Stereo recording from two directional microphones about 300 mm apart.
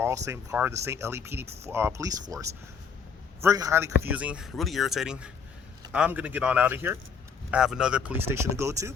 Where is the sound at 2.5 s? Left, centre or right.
Right.